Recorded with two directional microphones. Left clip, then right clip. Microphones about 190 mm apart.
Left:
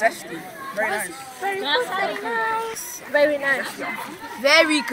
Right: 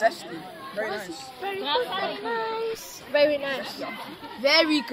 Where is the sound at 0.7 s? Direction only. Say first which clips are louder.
Left 6 dB; 35° right (ahead or behind).